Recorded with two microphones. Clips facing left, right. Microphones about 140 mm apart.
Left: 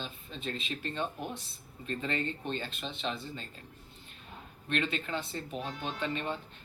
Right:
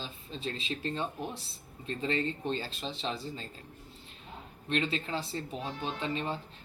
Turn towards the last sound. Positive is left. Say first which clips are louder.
# right 1 dB
turn(degrees=-30)  # may be behind; listen again after turning